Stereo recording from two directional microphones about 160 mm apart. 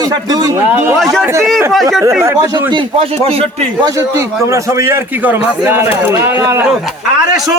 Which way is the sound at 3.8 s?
20° right (ahead or behind).